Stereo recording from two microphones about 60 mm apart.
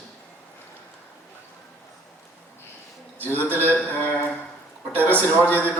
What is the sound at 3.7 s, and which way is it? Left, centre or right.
A man's voice, left.